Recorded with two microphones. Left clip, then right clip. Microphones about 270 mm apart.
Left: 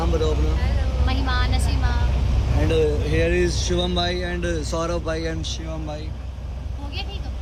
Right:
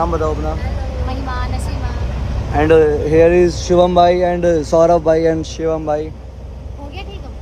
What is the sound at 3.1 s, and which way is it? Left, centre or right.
Speech, right.